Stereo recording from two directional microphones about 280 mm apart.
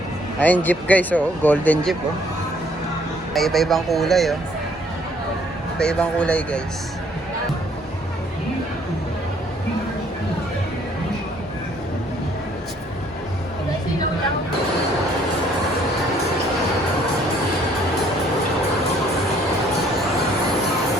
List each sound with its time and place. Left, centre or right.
0.3 s speech: centre
3.3 s speech: centre
5.8 s speech: centre